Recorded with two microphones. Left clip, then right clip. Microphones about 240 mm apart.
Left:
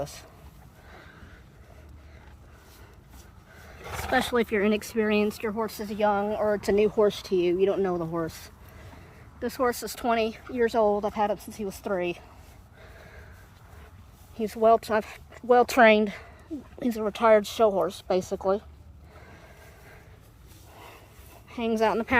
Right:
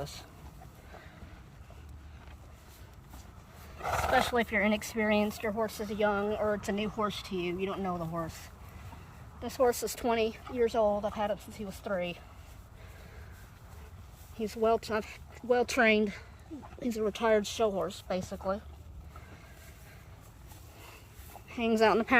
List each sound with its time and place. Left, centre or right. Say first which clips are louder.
0.0 s speech: left 6 dB; centre
4.1 s speech: left 5 dB; centre
14.3 s speech: left 8 dB; centre
16.5 s speech: left 8 dB; left
16.8 s speech: left 7 dB; centre
20.7 s a sound: left 6 dB; centre
21.5 s a woman's voice: left 1 dB; centre